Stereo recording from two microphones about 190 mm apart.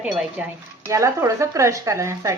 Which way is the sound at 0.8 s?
15° right (ahead or behind).